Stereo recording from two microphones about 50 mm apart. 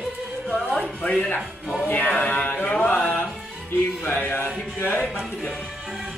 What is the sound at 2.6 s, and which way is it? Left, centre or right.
Mantra, left.